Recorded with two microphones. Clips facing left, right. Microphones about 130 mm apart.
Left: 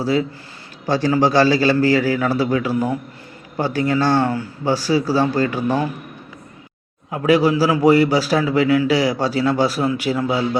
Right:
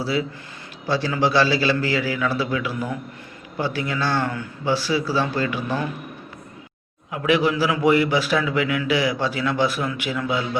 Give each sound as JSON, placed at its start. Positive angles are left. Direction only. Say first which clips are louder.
{"t": 0.0, "sound": "a man's voice", "louder": "left 5 dB", "side_deg": 45}
{"t": 7.1, "sound": "a man's voice", "louder": "left 4 dB", "side_deg": 40}